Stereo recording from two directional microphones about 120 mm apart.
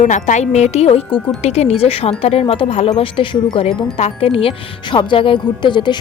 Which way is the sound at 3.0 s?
45° left (ahead or behind).